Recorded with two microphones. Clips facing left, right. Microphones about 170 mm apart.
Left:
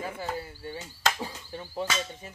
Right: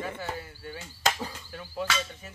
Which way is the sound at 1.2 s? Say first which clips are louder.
Left 1 dB; 20° left (ahead or behind).